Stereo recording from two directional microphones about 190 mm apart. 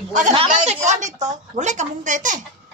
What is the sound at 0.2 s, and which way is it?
A woman's voice, 35° right (ahead or behind).